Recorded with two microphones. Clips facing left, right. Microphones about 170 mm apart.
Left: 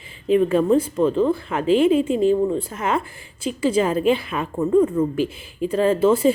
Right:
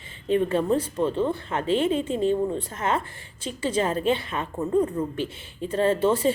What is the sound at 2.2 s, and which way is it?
Speech, 30° right (ahead or behind).